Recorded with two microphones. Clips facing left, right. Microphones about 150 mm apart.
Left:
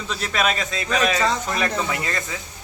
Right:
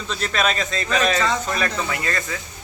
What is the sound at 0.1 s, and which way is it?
A man's voice, 10° left (ahead or behind).